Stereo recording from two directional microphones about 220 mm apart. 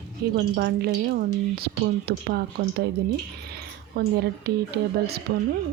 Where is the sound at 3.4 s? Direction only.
45° right (ahead or behind).